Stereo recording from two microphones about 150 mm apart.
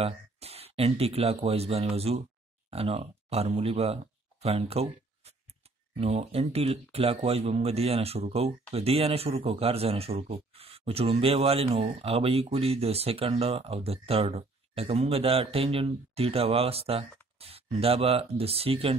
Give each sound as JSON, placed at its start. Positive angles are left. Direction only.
{"t": 0.0, "sound": "speech", "side_deg": -40}